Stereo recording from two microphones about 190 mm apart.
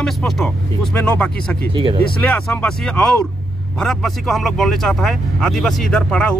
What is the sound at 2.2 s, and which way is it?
Speech, 5° left (ahead or behind).